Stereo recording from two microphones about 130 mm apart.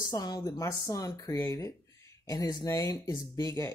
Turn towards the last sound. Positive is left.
turn(degrees=25)  # may be behind; listen again after turning